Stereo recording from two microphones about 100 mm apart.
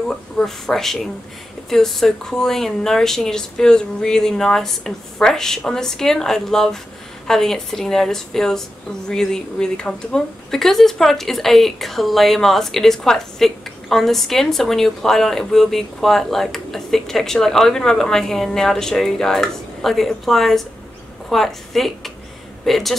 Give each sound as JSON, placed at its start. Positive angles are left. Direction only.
{"t": 0.1, "sound": "speech", "side_deg": 5}